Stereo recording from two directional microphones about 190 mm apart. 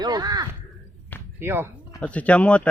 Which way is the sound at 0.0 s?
20° right (ahead or behind).